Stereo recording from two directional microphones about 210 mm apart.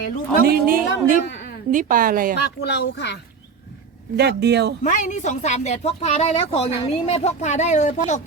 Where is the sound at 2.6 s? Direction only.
55° left (ahead or behind).